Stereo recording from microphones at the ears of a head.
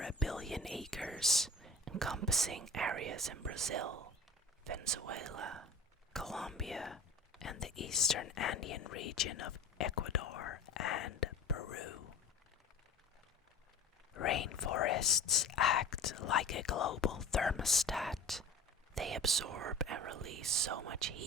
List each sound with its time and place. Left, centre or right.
0.4 s whispering: centre
1.8 s speech: right
6.1 s speech: centre
7.4 s speech: left
14.1 s speech: left
17.8 s speech: centre
18.9 s speech: right